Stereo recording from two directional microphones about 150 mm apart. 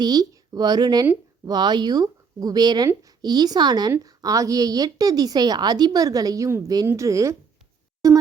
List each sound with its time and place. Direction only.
0.0 s speech: 25° right (ahead or behind)